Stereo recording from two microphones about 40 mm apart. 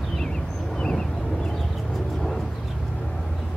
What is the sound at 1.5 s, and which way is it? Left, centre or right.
Music, centre.